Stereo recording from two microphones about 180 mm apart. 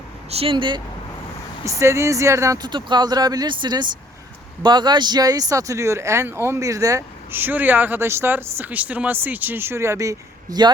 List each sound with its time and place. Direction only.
0.3 s speech: 30° right (ahead or behind)
1.6 s speech: 15° right (ahead or behind)